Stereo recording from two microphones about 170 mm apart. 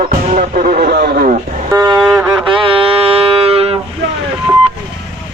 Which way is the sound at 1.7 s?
25° right (ahead or behind).